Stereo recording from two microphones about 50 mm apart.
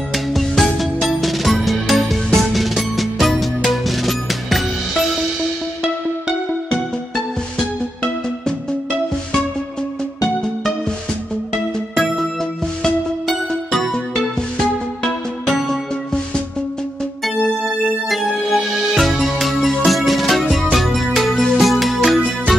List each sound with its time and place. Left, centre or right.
0.1 s music: centre
6.7 s music: centre
11.9 s music: centre
13.3 s music: centre
18.1 s music: centre